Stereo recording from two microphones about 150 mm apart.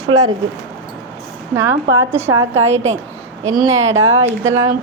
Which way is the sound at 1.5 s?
20° right (ahead or behind).